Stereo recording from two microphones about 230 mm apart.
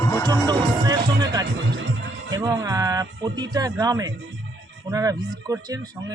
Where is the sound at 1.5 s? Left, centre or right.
Right.